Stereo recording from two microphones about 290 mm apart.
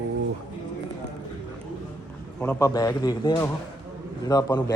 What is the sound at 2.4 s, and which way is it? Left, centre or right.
Speech, centre.